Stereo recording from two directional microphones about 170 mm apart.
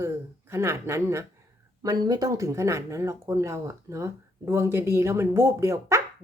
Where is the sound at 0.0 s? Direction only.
15° right (ahead or behind).